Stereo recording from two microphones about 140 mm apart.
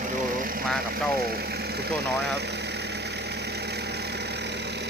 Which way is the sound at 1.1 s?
90° right.